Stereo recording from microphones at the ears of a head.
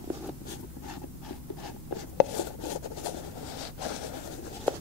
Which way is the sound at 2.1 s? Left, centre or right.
Left.